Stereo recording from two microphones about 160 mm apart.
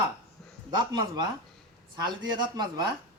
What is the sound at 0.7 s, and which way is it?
Speech, 25° right (ahead or behind).